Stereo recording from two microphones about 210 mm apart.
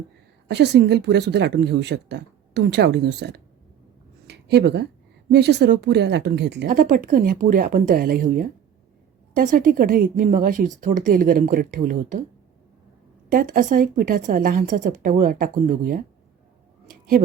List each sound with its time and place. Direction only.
0.4 s a woman's voice: 55° right (ahead or behind)
4.3 s a sound: 55° right (ahead or behind)
5.3 s a woman's voice: 55° right (ahead or behind)
13.3 s a woman's voice: 40° right (ahead or behind)